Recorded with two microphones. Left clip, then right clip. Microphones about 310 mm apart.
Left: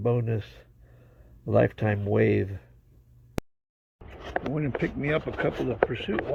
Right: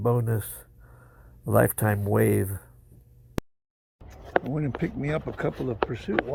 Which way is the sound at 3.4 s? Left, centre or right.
Centre.